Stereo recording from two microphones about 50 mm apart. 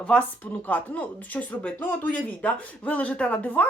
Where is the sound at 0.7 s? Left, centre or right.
Left.